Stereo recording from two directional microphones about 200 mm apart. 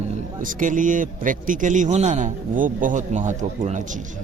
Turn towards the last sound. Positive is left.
turn(degrees=-35)  # may be behind; listen again after turning